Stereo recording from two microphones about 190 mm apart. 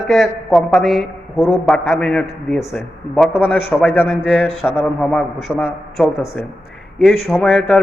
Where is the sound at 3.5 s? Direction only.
10° left (ahead or behind).